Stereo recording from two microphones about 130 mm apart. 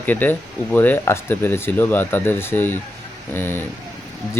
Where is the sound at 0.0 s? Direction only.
15° left (ahead or behind).